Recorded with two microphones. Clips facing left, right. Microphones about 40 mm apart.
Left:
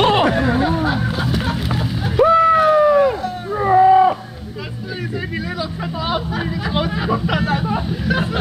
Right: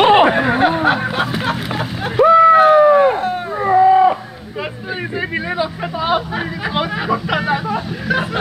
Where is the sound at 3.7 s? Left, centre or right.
Centre.